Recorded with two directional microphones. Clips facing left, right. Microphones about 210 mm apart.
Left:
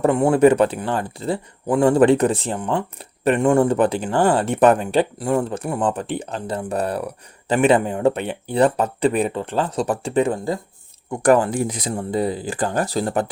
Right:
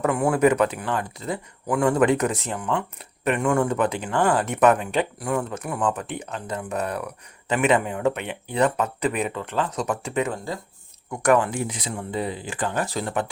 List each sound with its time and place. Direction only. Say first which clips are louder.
0.0 s speech: left 5 dB; 25° left (ahead or behind)